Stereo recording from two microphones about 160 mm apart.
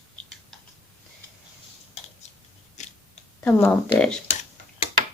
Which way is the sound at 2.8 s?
45° left (ahead or behind).